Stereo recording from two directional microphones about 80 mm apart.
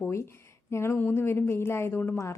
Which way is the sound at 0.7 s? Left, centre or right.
Left.